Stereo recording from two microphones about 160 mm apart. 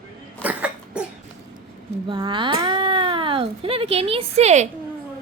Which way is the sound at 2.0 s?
30° right (ahead or behind).